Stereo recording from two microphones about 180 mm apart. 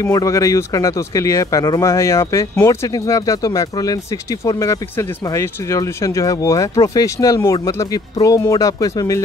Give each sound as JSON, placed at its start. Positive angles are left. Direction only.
{"t": 0.0, "sound": "speech", "side_deg": 15}